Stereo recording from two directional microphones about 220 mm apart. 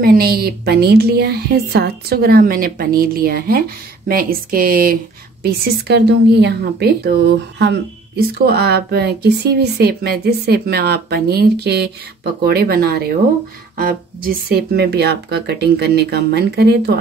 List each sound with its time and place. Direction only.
0.0 s a woman's voice: 45° right (ahead or behind)